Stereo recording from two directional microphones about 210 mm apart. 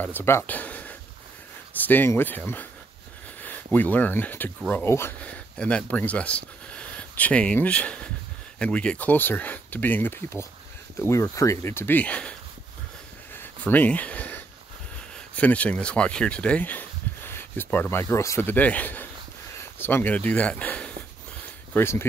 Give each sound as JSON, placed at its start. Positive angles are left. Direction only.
{"t": 0.0, "sound": "speech", "side_deg": 10}
{"t": 13.3, "sound": "a sound", "side_deg": 10}
{"t": 15.3, "sound": "speech", "side_deg": 5}